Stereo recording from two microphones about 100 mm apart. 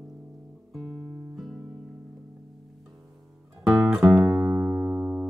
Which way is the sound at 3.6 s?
Centre (ahead or behind).